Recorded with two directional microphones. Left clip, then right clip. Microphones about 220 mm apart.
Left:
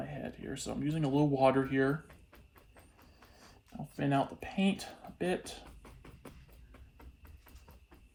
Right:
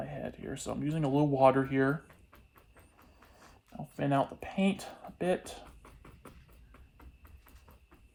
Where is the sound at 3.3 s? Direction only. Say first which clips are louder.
Right 2 dB; 25° right (ahead or behind).